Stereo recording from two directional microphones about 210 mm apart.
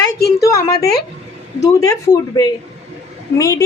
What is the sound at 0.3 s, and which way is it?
A woman's voice, 15° left (ahead or behind).